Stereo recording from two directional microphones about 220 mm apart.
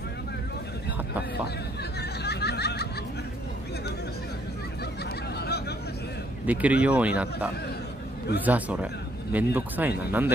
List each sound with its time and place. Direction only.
2.0 s snicker: 50° left (ahead or behind)
5.4 s vehicle: 50° left (ahead or behind)
6.4 s speech: 5° right (ahead or behind)